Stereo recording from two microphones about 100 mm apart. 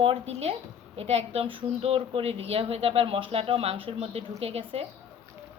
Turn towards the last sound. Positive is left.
turn(degrees=-90)